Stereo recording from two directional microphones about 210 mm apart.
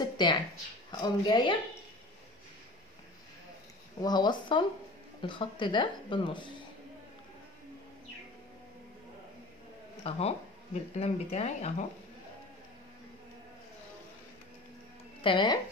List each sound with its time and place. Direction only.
0.0 s a sound: 20° left (ahead or behind)
1.0 s speech: 20° left (ahead or behind)
4.0 s speech: 20° left (ahead or behind)
10.0 s speech: 30° left (ahead or behind)
15.2 s speech: 20° left (ahead or behind)